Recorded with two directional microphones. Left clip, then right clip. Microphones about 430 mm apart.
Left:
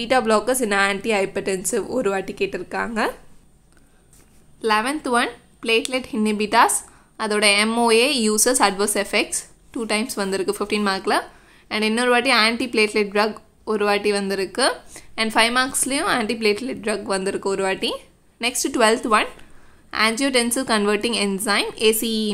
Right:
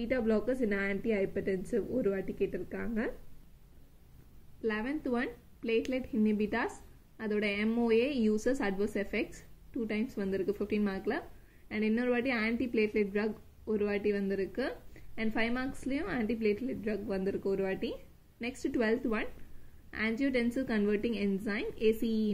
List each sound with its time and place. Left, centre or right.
0.0 s a woman's voice: left
4.6 s a woman's voice: centre
15.1 s a woman's voice: centre